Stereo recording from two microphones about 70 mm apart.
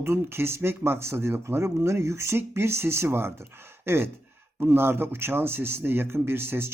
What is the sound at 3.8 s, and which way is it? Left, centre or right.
Gasp, right.